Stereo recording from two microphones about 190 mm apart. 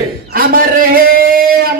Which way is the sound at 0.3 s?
50° right (ahead or behind).